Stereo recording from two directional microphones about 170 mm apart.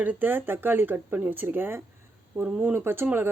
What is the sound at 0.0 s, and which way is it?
Speech, 10° right (ahead or behind).